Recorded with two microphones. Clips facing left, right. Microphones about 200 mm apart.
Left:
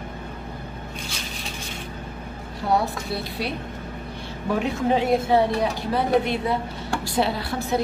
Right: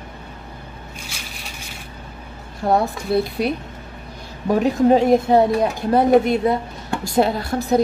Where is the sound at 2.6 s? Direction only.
50° right (ahead or behind).